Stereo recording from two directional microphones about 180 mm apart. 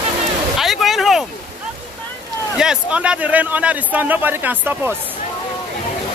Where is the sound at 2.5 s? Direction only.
5° right (ahead or behind).